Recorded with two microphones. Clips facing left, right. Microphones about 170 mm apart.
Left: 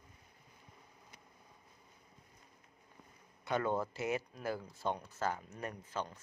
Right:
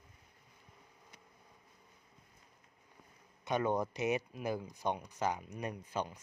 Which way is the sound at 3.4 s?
20° right (ahead or behind).